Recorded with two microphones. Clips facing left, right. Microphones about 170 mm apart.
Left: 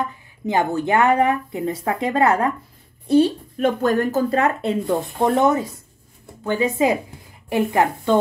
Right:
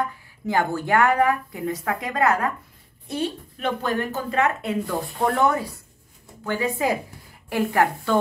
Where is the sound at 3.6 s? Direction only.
45° left (ahead or behind); by 8.1 s 20° left (ahead or behind).